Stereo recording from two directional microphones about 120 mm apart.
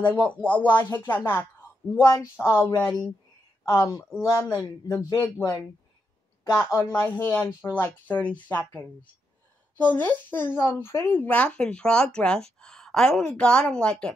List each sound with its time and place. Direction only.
0.1 s speech: 10° left (ahead or behind); by 4.6 s 30° left (ahead or behind)
4.8 s speech: 20° left (ahead or behind)
6.5 s speech: 20° left (ahead or behind)